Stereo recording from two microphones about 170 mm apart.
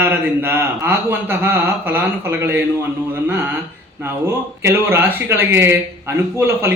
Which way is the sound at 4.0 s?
15° right (ahead or behind).